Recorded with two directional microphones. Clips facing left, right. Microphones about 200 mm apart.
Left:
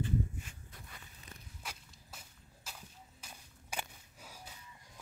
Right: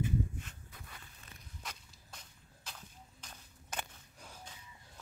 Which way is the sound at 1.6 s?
5° left (ahead or behind).